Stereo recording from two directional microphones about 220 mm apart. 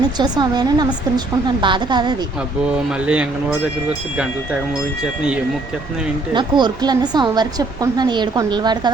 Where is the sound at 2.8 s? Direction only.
5° right (ahead or behind).